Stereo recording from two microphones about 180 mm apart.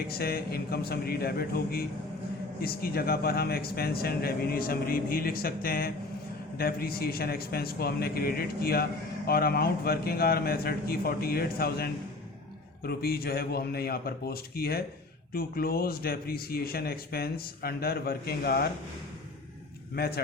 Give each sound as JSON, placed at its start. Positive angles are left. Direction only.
{"t": 0.1, "sound": "a man's voice", "side_deg": 60}
{"t": 20.0, "sound": "a man's voice", "side_deg": 60}